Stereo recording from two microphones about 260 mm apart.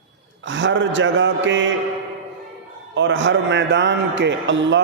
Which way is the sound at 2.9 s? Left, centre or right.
Right.